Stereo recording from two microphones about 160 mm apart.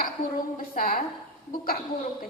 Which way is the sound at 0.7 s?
60° left (ahead or behind).